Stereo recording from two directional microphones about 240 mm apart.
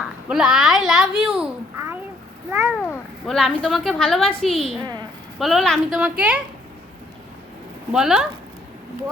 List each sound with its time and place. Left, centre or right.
0.0 s babbling: centre
2.5 s a sound: centre
2.7 s a woman's voice: centre
4.8 s a woman's voice: centre
5.4 s a woman's voice: centre
7.9 s a woman's voice: centre